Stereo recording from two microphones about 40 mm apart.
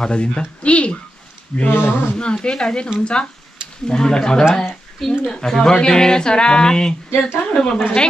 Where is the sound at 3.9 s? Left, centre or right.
Centre.